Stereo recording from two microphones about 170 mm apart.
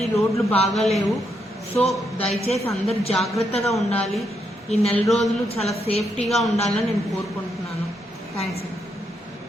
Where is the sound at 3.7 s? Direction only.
5° left (ahead or behind).